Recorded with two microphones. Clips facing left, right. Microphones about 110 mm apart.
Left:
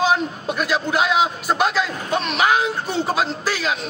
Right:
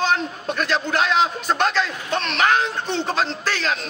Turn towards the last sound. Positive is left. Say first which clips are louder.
# left 1 dB
turn(degrees=5)  # may be behind; listen again after turning